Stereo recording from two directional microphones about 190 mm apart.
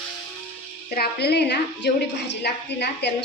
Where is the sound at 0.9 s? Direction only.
60° left (ahead or behind).